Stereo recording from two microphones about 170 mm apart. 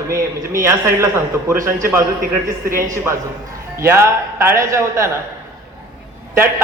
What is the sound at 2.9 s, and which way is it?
A man's voice, 15° right (ahead or behind).